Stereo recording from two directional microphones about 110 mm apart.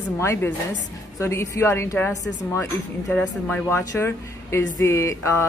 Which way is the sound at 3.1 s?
15° left (ahead or behind).